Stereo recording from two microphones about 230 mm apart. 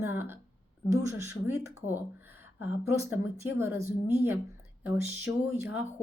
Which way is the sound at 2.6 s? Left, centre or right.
Centre.